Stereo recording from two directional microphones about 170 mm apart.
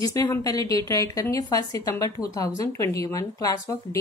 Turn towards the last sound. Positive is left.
turn(degrees=20)  # may be behind; listen again after turning